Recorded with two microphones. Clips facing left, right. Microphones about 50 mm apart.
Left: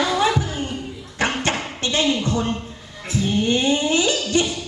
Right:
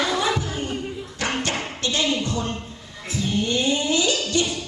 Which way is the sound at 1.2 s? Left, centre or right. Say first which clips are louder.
Left 4 dB; left.